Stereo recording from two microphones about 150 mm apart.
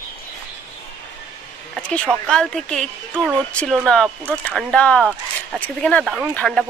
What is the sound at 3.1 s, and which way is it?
Speech, 10° right (ahead or behind).